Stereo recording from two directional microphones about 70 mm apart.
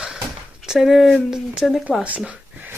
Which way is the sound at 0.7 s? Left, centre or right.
Centre.